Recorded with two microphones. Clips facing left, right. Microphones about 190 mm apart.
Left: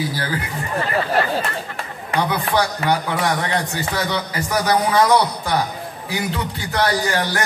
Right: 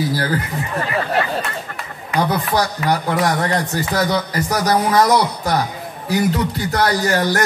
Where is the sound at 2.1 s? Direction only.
40° right (ahead or behind).